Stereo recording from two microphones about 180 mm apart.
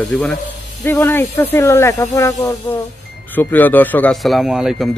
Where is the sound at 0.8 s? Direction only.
15° left (ahead or behind); by 4.9 s centre (ahead or behind).